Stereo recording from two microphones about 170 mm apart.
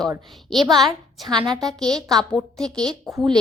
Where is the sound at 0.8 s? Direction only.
25° right (ahead or behind).